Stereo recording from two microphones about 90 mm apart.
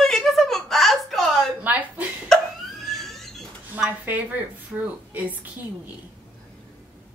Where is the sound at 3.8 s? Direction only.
20° right (ahead or behind).